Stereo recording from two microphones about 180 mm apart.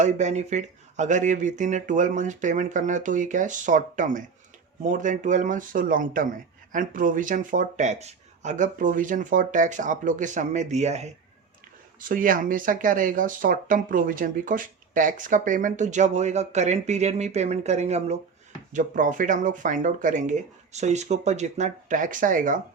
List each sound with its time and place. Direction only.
0.0 s speech: 40° right (ahead or behind)
11.9 s speech: 50° right (ahead or behind)